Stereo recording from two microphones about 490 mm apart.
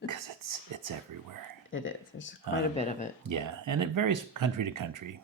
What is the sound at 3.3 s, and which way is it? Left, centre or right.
Speech, right.